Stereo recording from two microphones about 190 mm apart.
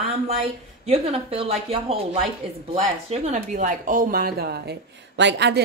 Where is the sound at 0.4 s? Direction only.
30° right (ahead or behind).